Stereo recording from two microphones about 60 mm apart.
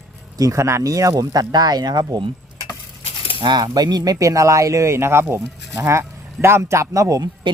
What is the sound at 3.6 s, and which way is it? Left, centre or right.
Speech, right.